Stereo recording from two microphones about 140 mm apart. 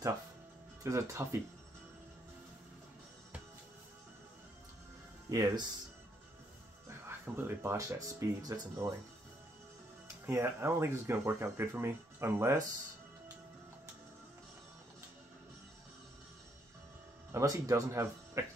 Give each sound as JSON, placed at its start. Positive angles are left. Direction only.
{"t": 0.8, "sound": "speech", "side_deg": -20}
{"t": 5.3, "sound": "speech", "side_deg": -25}
{"t": 7.1, "sound": "speech", "side_deg": -15}
{"t": 10.2, "sound": "speech", "side_deg": -20}
{"t": 17.3, "sound": "speech", "side_deg": -20}